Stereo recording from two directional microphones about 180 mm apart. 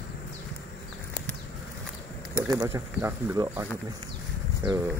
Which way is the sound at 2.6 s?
20° right (ahead or behind).